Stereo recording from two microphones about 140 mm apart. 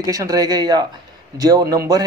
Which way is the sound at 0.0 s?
25° right (ahead or behind).